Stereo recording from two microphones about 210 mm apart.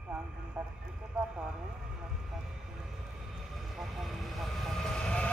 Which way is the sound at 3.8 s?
Centre (ahead or behind).